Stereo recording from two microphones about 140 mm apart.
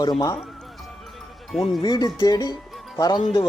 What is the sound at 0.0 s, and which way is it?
Speech, 30° left (ahead or behind).